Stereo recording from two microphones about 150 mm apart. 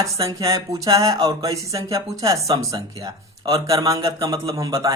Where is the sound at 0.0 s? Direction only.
20° right (ahead or behind).